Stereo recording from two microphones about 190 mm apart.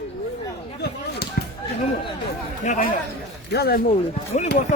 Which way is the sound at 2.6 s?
45° left (ahead or behind).